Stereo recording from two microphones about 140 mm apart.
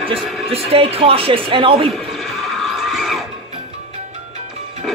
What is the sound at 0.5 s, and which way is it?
Speech, 45° right (ahead or behind).